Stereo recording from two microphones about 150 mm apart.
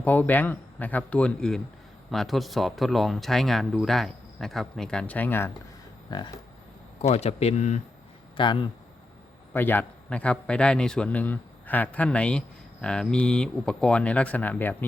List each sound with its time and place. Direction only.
0.0 s a man's voice: 10° left (ahead or behind)
6.1 s speech: 25° left (ahead or behind)
7.1 s speech: 45° left (ahead or behind)
8.4 s speech: 30° left (ahead or behind)
9.5 s a man's voice: 15° left (ahead or behind)